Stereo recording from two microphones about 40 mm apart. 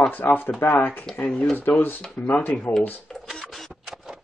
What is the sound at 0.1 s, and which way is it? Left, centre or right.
Speech, left.